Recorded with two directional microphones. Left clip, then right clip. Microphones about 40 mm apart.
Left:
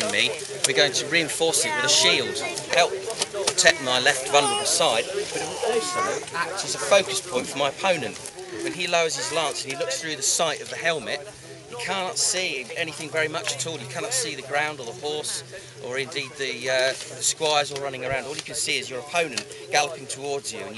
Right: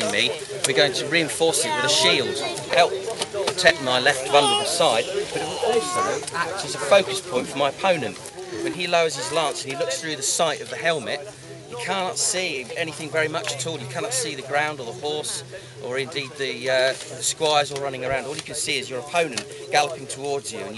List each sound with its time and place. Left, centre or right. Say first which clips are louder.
0.0 s speech: right 1 dB; centre
3.4 s bird: right 1 dB; centre
3.8 s speech: right 1 dB; centre
5.9 s speech: right 2 dB; right
6.3 s speech: right 1 dB; centre